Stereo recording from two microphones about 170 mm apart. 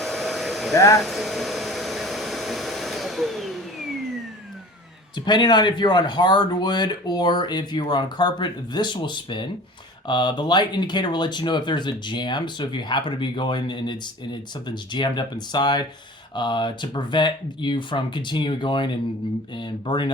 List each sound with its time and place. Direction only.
0.0 s hair dryer: centre (ahead or behind)
5.2 s speech: 25° left (ahead or behind)